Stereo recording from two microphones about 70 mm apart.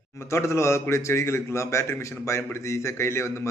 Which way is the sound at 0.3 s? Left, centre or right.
Left.